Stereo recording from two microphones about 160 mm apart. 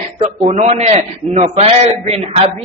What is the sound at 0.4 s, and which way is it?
A man's voice, 40° right (ahead or behind).